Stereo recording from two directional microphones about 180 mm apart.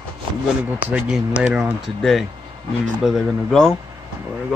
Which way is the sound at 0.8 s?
5° right (ahead or behind).